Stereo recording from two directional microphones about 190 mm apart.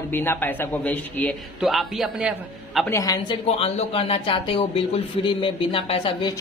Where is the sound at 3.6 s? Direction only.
35° left (ahead or behind).